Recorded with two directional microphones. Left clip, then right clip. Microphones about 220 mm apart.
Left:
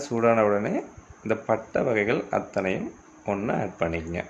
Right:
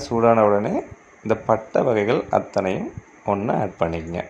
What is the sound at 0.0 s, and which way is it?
Speech, 20° right (ahead or behind).